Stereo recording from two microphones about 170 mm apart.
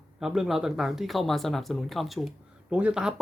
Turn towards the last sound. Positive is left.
turn(degrees=-5)  # may be behind; listen again after turning